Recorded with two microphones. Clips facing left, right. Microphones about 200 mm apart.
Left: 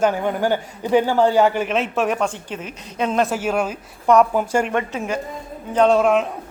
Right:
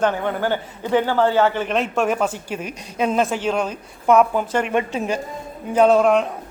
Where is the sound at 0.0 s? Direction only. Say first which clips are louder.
Left 1 dB; 10° left (ahead or behind).